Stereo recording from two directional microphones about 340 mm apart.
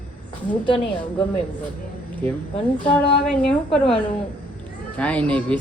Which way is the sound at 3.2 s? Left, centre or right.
Centre.